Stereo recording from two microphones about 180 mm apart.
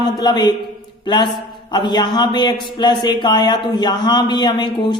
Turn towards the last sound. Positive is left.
turn(degrees=25)  # may be behind; listen again after turning